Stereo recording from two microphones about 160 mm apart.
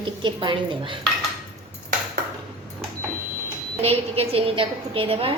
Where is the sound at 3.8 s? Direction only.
35° right (ahead or behind).